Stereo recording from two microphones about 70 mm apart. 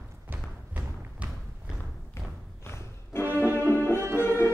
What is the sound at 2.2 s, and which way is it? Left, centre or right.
Thump, left.